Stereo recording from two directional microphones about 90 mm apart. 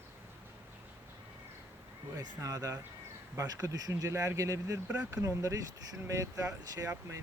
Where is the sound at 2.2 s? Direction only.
40° right (ahead or behind).